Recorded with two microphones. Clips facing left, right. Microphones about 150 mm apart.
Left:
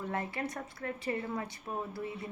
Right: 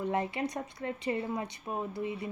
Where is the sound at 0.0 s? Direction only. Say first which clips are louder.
Right 4 dB; 20° right (ahead or behind).